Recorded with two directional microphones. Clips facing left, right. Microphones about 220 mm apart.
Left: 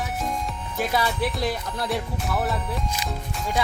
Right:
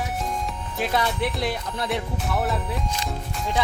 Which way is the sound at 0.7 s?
Centre (ahead or behind).